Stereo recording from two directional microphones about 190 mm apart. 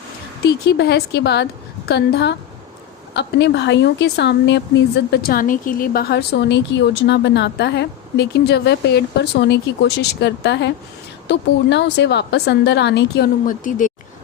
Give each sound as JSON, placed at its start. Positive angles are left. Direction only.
{"t": 0.4, "sound": "speech", "side_deg": 60}
{"t": 13.4, "sound": "speech", "side_deg": 45}